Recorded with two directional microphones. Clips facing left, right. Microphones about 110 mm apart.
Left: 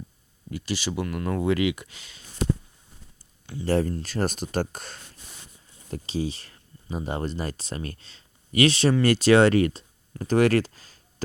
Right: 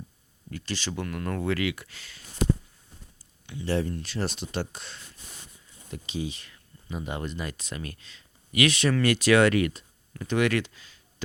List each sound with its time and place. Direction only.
0.5 s speech: 10° left (ahead or behind)
3.4 s speech: 35° left (ahead or behind)
5.9 s speech: 35° left (ahead or behind)